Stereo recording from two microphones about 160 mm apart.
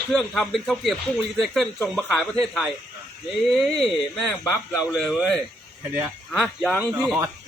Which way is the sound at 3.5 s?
Centre (ahead or behind).